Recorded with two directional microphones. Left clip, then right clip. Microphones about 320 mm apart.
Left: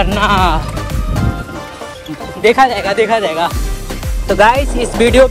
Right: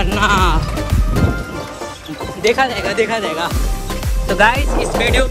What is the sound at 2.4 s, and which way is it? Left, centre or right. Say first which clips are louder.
Speech: left 5 dB; centre.